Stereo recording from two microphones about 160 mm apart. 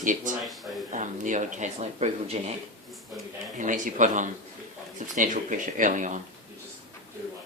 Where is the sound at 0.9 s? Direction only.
50° right (ahead or behind).